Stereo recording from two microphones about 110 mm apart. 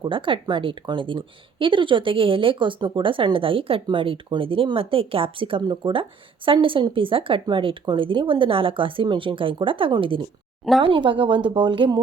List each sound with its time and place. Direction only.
0.0 s speech: 50° right (ahead or behind)